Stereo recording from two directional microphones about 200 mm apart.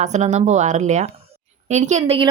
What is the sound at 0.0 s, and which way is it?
A woman's voice, 35° right (ahead or behind).